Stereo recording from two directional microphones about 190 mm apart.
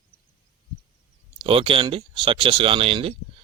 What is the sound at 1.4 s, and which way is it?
A man's voice, 30° right (ahead or behind).